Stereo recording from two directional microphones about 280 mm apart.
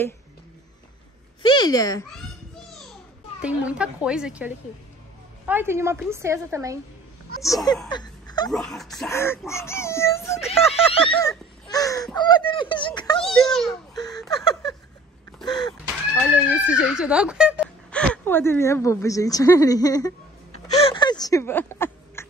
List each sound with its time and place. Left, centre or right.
1.4 s speech: centre
3.3 s speech: centre
5.5 s a woman's voice: centre
7.4 s speech: centre
7.9 s a sound: centre
8.5 s speech: centre
13.2 s a child's voice: centre
14.1 s a sound: centre
16.2 s speech: centre
20.8 s a sound: centre